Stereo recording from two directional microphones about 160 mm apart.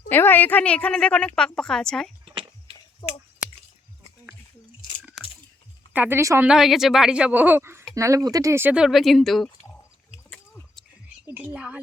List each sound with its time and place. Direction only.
0.1 s a woman's voice: 15° left (ahead or behind)
2.2 s a sound: 30° right (ahead or behind)
3.0 s speech: 25° left (ahead or behind)
5.9 s speech: 10° right (ahead or behind)
6.5 s speech: centre (ahead or behind)
10.3 s a sound: 10° left (ahead or behind)
11.3 s speech: 10° right (ahead or behind)